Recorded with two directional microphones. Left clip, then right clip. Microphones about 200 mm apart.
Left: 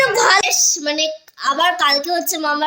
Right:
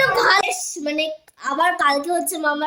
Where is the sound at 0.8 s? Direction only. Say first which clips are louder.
Left 3 dB; 5° right (ahead or behind).